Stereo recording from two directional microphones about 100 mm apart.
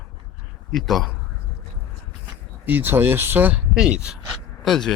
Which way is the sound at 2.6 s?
20° right (ahead or behind).